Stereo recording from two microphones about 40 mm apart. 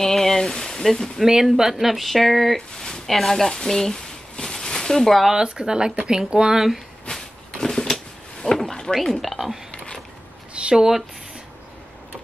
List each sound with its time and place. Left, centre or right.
0.0 s speech: centre
1.2 s speech: centre
3.9 s a sound: left
5.3 s speech: right
7.1 s a sound: centre
8.9 s speech: centre
10.8 s speech: centre